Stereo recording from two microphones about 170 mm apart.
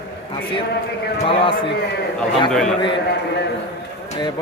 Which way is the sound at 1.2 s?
30° left (ahead or behind).